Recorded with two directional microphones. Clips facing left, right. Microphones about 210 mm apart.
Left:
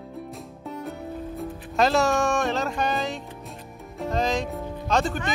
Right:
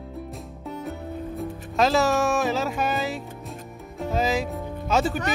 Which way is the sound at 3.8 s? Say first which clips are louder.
Even; centre (ahead or behind).